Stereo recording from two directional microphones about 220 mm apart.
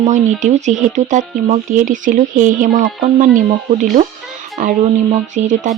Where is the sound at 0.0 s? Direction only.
30° right (ahead or behind).